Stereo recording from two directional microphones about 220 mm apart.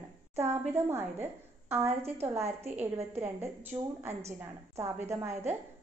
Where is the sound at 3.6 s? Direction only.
10° right (ahead or behind).